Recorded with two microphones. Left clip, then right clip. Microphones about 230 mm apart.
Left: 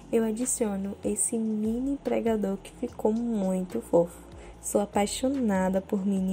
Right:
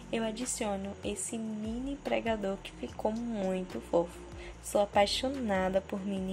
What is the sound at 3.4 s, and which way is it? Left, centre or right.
Speech, centre.